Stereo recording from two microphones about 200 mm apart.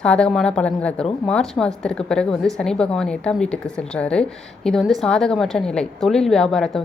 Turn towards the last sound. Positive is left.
turn(degrees=0)  # may be behind; listen again after turning